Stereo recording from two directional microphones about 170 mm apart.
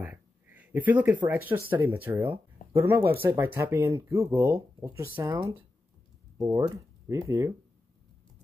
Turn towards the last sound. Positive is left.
turn(degrees=-20)  # may be behind; listen again after turning